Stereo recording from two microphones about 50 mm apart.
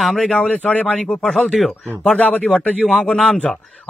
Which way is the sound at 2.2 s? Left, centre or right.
Left.